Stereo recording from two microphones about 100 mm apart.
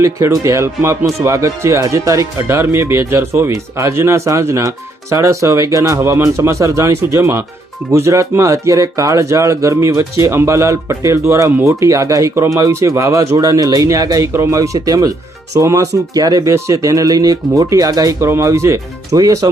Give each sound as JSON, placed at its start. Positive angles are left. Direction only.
{"t": 0.0, "sound": "speech", "side_deg": -30}